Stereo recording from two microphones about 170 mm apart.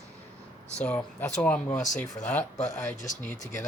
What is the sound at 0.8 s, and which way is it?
Speech, 5° left (ahead or behind).